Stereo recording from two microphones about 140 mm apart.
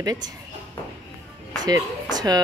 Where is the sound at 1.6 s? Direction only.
30° right (ahead or behind).